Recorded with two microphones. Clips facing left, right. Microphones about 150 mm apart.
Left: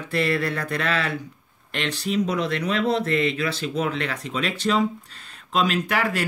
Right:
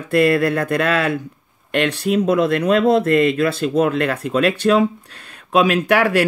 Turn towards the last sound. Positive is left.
turn(degrees=-70)  # may be behind; listen again after turning